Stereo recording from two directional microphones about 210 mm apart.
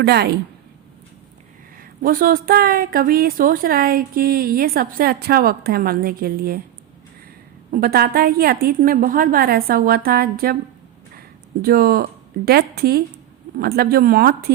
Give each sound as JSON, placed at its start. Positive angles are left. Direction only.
{"t": 0.0, "sound": "a woman's voice", "side_deg": -50}
{"t": 1.8, "sound": "a woman's voice", "side_deg": -40}
{"t": 7.7, "sound": "a woman's voice", "side_deg": -45}
{"t": 11.6, "sound": "a woman's voice", "side_deg": -45}